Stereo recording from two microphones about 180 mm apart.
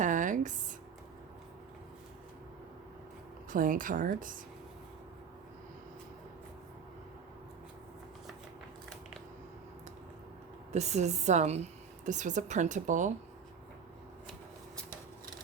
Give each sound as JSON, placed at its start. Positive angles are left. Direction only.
{"t": 0.0, "sound": "a sound", "side_deg": -45}
{"t": 3.5, "sound": "speech", "side_deg": -50}
{"t": 10.7, "sound": "a woman's voice", "side_deg": -40}